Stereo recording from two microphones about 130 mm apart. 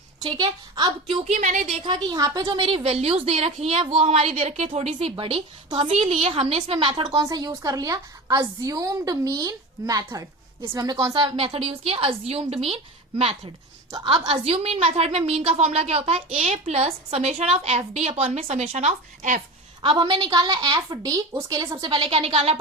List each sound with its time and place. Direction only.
0.3 s a woman's voice: 30° right (ahead or behind)
1.2 s a woman's voice: 70° right (ahead or behind)
1.8 s a woman's voice: 35° right (ahead or behind)
2.6 s a woman's voice: 45° right (ahead or behind)
6.9 s a woman's voice: 30° right (ahead or behind); by 19.4 s 70° right (ahead or behind)
19.8 s a woman's voice: 40° right (ahead or behind)
21.8 s a woman's voice: 40° right (ahead or behind)